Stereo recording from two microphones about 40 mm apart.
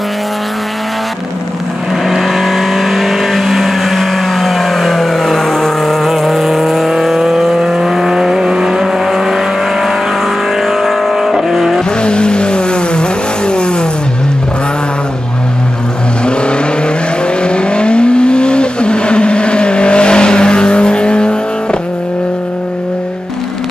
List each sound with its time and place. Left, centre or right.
2.0 s vehicle: centre
12.0 s vehicle: left
16.3 s vehicle: left